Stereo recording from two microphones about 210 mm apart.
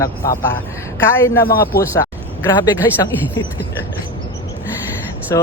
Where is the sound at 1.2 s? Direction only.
10° left (ahead or behind).